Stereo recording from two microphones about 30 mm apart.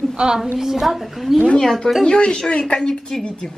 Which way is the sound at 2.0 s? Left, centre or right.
Left.